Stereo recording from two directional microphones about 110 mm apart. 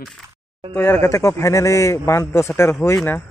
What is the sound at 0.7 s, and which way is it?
Speech, 20° left (ahead or behind).